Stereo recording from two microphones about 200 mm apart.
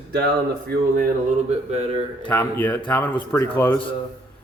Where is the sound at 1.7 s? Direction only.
30° right (ahead or behind).